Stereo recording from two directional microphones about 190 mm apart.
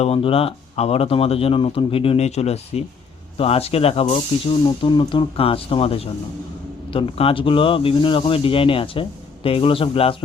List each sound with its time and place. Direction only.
0.0 s speech: 30° left (ahead or behind)